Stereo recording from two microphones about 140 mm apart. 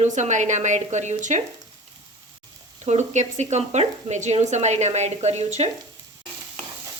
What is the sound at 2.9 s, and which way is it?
Speech, 55° right (ahead or behind).